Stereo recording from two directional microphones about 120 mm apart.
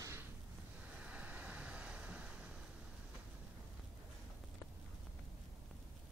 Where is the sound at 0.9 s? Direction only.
10° right (ahead or behind).